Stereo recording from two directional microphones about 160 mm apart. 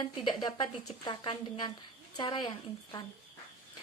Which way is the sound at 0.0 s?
25° left (ahead or behind).